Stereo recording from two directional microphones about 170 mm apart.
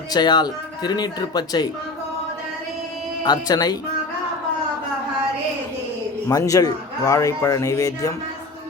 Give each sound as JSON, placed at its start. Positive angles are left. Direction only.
{"t": 0.1, "sound": "a man's voice", "side_deg": 25}
{"t": 3.2, "sound": "a man's voice", "side_deg": 25}
{"t": 6.2, "sound": "a man's voice", "side_deg": 20}